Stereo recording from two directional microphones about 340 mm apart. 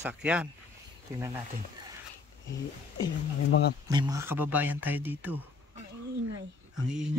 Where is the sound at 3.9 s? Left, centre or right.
Centre.